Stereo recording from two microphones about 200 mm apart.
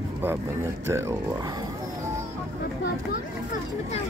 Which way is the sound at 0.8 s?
15° right (ahead or behind).